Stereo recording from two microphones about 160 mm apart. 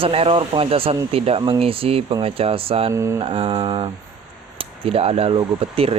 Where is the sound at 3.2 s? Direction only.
35° right (ahead or behind).